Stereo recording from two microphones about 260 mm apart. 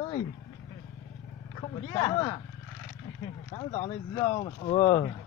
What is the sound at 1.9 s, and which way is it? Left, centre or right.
Speech, centre.